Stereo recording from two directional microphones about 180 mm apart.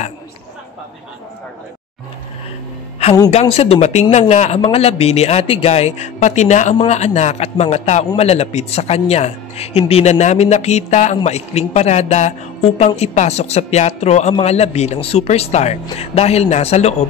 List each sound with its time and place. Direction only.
3.3 s a man's voice: 35° left (ahead or behind)